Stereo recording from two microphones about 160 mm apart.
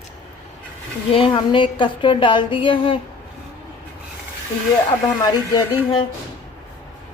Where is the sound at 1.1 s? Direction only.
35° left (ahead or behind).